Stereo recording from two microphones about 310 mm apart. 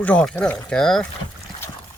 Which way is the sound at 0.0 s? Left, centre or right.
Centre.